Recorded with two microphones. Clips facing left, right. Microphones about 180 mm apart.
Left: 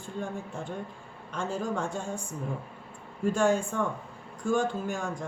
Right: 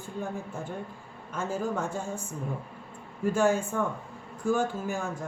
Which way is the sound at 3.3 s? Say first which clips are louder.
Even; 5° right (ahead or behind).